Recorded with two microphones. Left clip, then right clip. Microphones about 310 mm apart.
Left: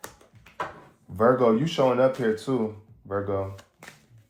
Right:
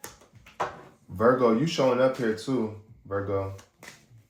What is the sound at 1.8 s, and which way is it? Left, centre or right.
Speech, left.